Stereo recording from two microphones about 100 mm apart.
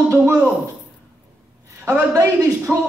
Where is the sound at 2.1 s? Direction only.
30° right (ahead or behind).